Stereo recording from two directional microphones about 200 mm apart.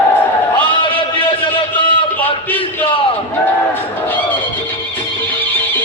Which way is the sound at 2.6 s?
25° left (ahead or behind).